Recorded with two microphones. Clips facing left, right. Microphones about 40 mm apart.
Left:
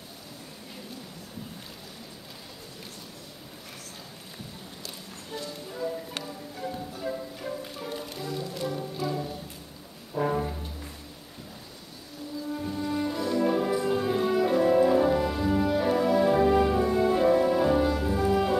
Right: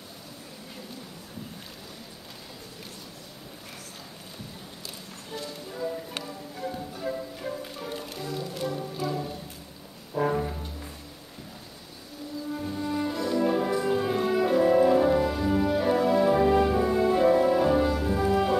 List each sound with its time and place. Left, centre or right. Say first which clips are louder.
5.4 s music: even; centre
12.5 s music: even; centre